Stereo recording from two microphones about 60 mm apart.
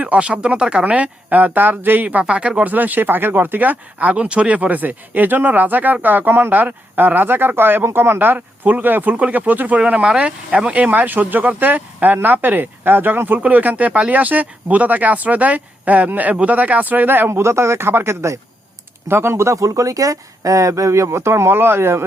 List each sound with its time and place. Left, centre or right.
0.0 s speech: centre
2.7 s speech: right